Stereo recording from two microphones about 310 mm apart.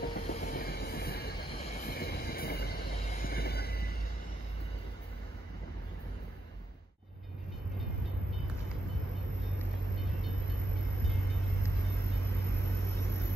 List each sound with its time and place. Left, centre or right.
0.0 s train: left
12.9 s vehicle: centre